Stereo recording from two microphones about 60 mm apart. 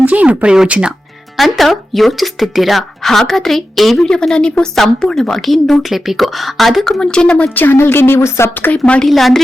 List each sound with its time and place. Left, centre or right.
0.0 s speech: right
1.4 s speech: centre
7.0 s a woman's voice: centre
7.5 s a woman's voice: left
8.7 s a woman's voice: left
9.0 s speech: centre